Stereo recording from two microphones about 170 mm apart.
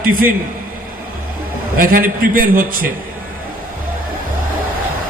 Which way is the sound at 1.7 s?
55° right (ahead or behind).